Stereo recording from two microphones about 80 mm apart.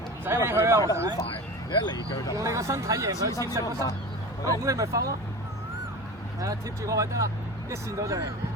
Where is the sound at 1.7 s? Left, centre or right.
Left.